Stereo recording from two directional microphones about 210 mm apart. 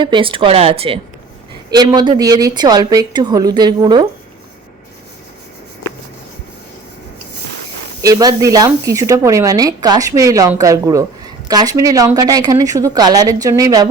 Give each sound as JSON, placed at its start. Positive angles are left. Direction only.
{"t": 0.0, "sound": "a woman's voice", "side_deg": -25}
{"t": 8.0, "sound": "speech", "side_deg": -20}